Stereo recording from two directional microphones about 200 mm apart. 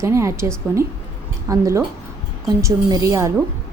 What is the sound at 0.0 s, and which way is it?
A woman's voice, 15° right (ahead or behind).